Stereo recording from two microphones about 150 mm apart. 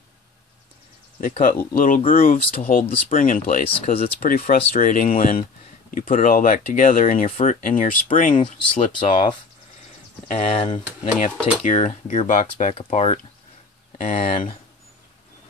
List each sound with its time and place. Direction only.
1.2 s speech: 65° left (ahead or behind)
3.6 s speech: 40° left (ahead or behind)
4.2 s speech: 70° left (ahead or behind)
7.2 s speech: 50° left (ahead or behind)
10.4 s speech: 40° left (ahead or behind)
11.6 s speech: 55° left (ahead or behind)
12.3 s speech: 55° left (ahead or behind)
12.7 s speech: 40° left (ahead or behind)
13.9 s speech: 55° left (ahead or behind)